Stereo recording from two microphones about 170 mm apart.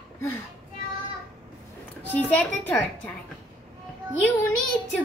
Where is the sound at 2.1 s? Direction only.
10° left (ahead or behind).